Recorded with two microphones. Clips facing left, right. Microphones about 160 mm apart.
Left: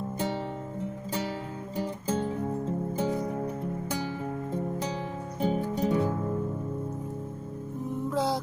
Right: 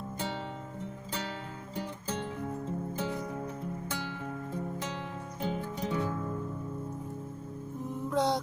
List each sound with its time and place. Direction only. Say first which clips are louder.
1.7 s music: left 6 dB; 15° left (ahead or behind)
5.4 s music: left 7 dB; 15° left (ahead or behind)
5.9 s music: left 3 dB; 30° left (ahead or behind)
8.1 s music: even; centre (ahead or behind)